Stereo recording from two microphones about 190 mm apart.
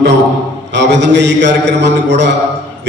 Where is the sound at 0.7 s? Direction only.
65° right (ahead or behind).